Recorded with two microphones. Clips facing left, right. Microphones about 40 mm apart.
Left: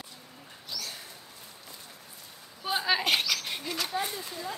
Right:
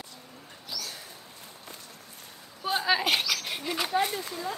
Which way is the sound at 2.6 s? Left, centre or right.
Centre.